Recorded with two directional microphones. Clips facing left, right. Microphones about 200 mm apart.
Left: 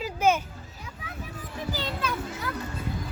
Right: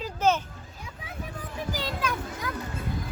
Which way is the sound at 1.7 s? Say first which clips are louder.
Right 1 dB; 10° right (ahead or behind).